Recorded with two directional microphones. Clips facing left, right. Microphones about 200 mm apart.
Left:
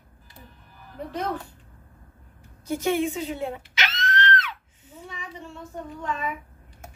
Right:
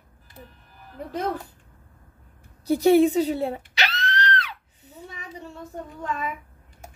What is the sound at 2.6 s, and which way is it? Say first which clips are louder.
A woman's voice: right 8 dB; 35° right (ahead or behind).